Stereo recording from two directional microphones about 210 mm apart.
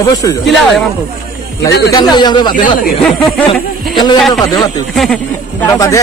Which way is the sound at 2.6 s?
40° left (ahead or behind).